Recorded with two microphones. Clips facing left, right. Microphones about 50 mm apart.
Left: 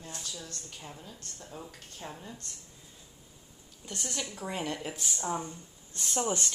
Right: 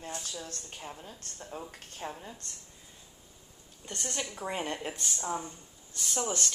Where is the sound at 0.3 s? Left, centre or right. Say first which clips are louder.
Right 2 dB; right.